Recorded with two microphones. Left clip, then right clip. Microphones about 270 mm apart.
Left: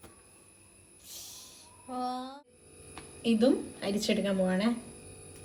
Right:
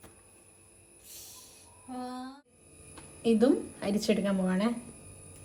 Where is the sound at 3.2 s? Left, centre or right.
Centre.